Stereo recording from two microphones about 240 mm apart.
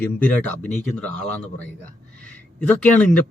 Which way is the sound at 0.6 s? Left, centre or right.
Left.